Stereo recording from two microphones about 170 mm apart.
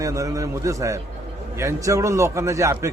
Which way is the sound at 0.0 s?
20° right (ahead or behind).